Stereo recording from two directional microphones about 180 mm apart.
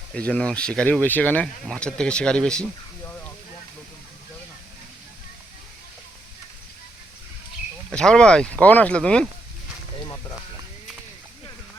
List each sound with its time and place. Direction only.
0.1 s speech: 5° left (ahead or behind)
7.9 s speech: 5° left (ahead or behind)
10.0 s a sound: 20° left (ahead or behind)